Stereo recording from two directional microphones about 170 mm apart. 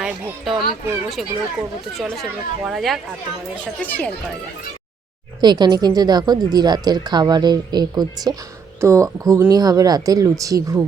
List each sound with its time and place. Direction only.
0.0 s a sound: centre (ahead or behind)
1.1 s speech: centre (ahead or behind)
5.4 s speech: 25° right (ahead or behind)